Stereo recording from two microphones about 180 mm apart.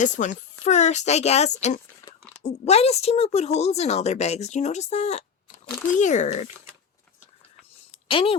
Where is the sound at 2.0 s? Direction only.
15° left (ahead or behind).